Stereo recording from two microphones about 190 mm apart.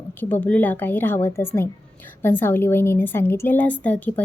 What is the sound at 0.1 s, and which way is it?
A woman's voice, 10° left (ahead or behind).